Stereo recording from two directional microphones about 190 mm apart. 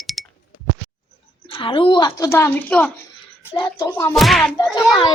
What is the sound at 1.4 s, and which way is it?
Speech, 25° left (ahead or behind).